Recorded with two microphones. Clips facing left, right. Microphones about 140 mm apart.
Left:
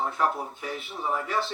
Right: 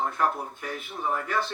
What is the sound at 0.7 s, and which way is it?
Speech, 50° right (ahead or behind).